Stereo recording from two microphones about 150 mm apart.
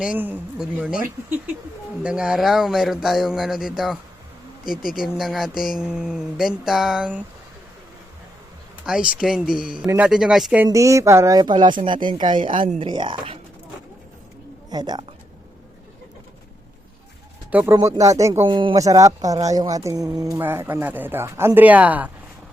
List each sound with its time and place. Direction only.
0.0 s speech: 10° right (ahead or behind)
4.6 s speech: 70° left (ahead or behind)
4.9 s speech: centre (ahead or behind)
8.9 s speech: 5° right (ahead or behind)
10.7 s speech: 20° right (ahead or behind)
14.7 s speech: 25° right (ahead or behind)
17.5 s speech: 10° right (ahead or behind)
17.7 s speech: 20° right (ahead or behind)
18.4 s speech: 35° right (ahead or behind); by 22.1 s 10° right (ahead or behind)